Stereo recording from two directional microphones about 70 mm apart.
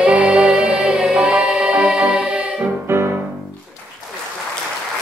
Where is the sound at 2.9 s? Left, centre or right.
Right.